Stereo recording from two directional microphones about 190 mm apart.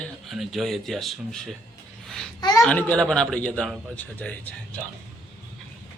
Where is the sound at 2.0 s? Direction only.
Centre (ahead or behind).